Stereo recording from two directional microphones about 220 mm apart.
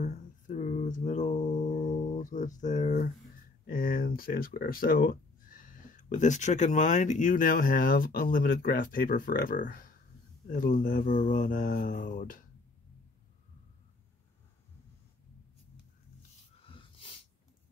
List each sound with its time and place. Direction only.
0.0 s music: 35° left (ahead or behind)
2.1 s speech: 35° left (ahead or behind)
16.6 s snort: 25° left (ahead or behind)